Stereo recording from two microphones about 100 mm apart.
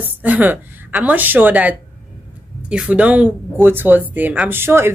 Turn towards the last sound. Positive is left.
turn(degrees=-25)  # may be behind; listen again after turning